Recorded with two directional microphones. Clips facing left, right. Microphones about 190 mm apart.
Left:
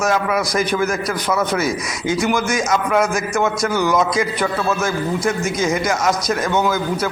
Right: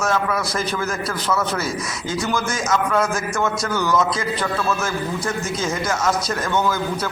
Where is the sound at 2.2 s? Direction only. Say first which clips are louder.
Left 3 dB; 15° left (ahead or behind).